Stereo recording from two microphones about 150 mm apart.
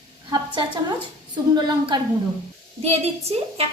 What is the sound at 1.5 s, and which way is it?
Speech, 30° right (ahead or behind).